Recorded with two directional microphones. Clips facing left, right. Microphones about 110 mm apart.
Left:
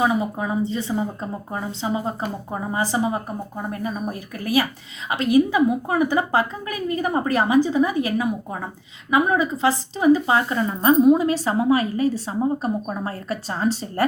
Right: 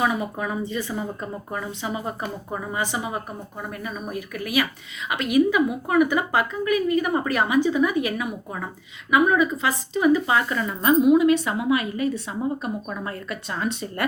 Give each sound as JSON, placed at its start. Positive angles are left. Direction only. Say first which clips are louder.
{"t": 0.0, "sound": "a woman's voice", "louder": "left 3 dB", "side_deg": 25}